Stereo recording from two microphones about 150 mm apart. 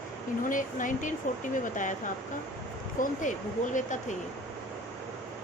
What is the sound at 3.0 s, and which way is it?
A woman's voice, 60° left (ahead or behind).